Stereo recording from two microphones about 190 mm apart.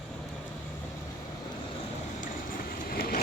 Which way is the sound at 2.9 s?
50° left (ahead or behind).